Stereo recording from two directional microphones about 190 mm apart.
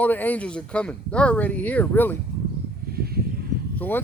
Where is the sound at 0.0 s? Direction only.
10° left (ahead or behind).